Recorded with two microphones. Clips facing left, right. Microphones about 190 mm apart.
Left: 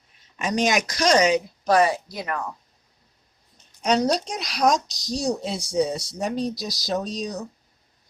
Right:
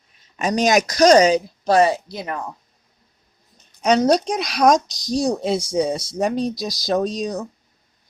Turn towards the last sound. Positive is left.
turn(degrees=-50)  # may be behind; listen again after turning